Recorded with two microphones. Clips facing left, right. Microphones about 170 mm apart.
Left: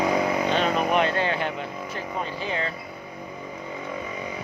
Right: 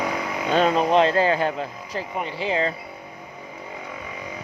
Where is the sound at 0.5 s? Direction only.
35° right (ahead or behind).